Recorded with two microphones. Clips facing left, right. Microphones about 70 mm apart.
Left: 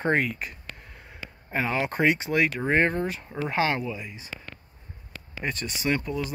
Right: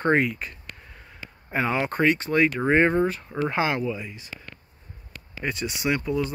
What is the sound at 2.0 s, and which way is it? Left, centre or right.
Speech, centre.